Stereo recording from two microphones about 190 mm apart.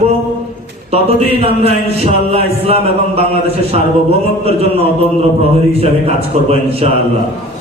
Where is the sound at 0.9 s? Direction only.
35° right (ahead or behind).